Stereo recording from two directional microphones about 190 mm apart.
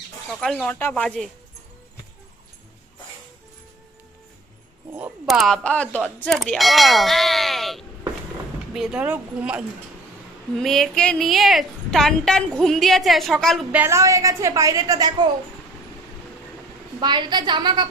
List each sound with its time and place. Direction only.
0.3 s a woman's voice: centre (ahead or behind)
4.9 s a woman's voice: 10° right (ahead or behind)
13.8 s a woman's voice: 15° right (ahead or behind)
17.0 s a woman's voice: 25° right (ahead or behind)